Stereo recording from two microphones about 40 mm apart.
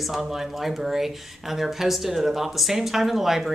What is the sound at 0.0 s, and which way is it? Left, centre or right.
Speech, centre.